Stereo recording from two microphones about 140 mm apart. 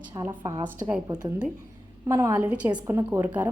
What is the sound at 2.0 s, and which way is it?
A woman's voice, 20° right (ahead or behind).